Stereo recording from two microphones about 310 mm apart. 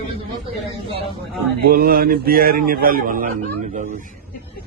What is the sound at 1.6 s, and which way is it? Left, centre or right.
A man's voice, right.